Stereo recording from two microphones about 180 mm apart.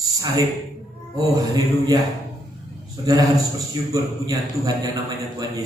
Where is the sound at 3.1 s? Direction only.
20° right (ahead or behind).